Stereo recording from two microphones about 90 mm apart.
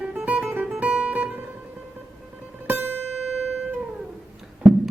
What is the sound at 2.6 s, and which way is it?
Music, 25° right (ahead or behind).